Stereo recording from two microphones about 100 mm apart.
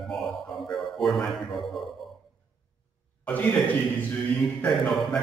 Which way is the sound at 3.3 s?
15° left (ahead or behind).